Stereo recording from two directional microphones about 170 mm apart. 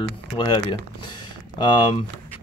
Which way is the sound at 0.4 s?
25° left (ahead or behind).